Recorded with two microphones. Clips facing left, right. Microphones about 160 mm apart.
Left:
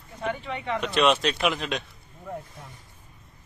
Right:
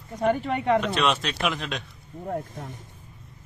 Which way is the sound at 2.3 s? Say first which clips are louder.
Right 6 dB; 50° right (ahead or behind).